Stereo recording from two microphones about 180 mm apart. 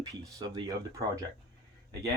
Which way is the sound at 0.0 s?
20° right (ahead or behind).